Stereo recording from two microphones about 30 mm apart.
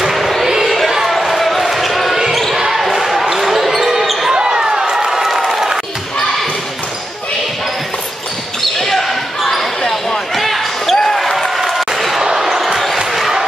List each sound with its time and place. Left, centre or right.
0.0 s basketball bounce: centre
2.5 s basketball bounce: centre
4.3 s basketball bounce: right
4.9 s crowd: centre
8.9 s basketball bounce: centre
11.1 s a sound: centre
11.7 s basketball bounce: centre